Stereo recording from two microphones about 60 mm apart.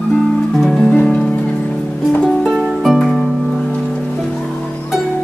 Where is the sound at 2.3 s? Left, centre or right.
Centre.